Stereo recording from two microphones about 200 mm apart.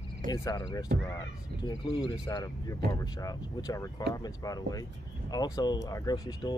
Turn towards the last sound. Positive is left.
turn(degrees=20)  # may be behind; listen again after turning